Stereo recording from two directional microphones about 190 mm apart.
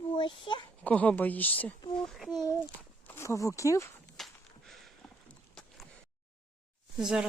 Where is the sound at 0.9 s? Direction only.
5° left (ahead or behind).